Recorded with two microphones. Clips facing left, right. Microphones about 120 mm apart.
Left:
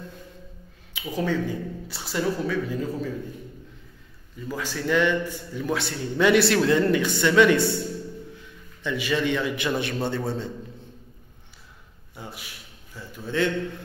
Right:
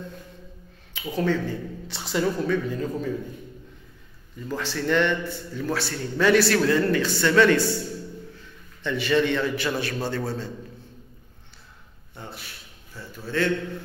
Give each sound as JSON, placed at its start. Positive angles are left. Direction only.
{"t": 0.9, "sound": "speech", "side_deg": 10}
{"t": 4.5, "sound": "a man's voice", "side_deg": 10}
{"t": 8.8, "sound": "a man's voice", "side_deg": 10}
{"t": 12.2, "sound": "a man's voice", "side_deg": 10}